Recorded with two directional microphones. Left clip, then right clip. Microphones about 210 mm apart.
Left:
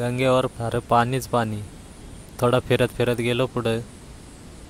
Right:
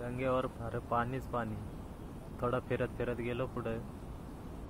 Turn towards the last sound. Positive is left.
turn(degrees=50)  # may be behind; listen again after turning